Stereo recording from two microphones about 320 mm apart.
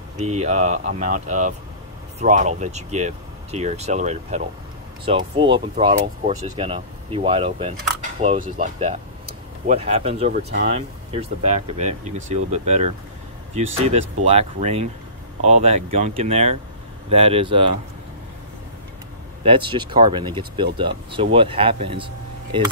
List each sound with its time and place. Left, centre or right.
0.2 s speech: right
13.8 s speech: centre
19.4 s speech: centre